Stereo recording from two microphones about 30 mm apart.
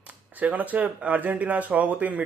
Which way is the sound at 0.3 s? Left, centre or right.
Right.